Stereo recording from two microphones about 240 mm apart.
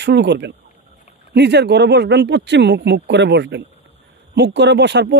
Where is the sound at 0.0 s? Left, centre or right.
Right.